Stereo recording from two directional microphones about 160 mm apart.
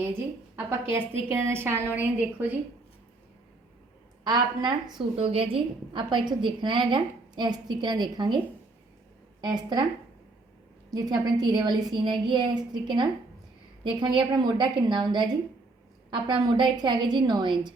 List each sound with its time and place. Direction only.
0.5 s a woman's voice: 15° right (ahead or behind)
4.2 s a woman's voice: 25° right (ahead or behind)
9.4 s a woman's voice: 30° right (ahead or behind)
10.9 s a woman's voice: 25° right (ahead or behind)